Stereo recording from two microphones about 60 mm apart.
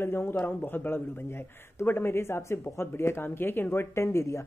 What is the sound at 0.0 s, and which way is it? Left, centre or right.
Speech, left.